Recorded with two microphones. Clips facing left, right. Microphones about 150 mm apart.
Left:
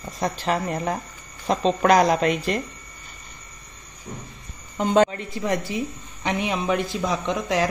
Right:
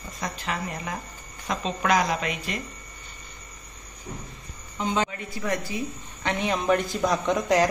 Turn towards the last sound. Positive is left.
turn(degrees=0)  # may be behind; listen again after turning